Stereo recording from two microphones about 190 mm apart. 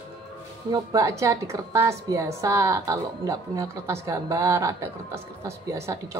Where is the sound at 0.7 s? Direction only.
15° right (ahead or behind).